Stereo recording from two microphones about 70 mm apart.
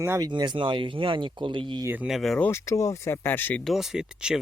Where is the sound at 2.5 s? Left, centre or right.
Left.